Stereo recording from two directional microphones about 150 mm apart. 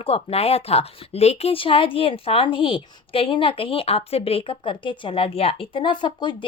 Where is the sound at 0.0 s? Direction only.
40° left (ahead or behind).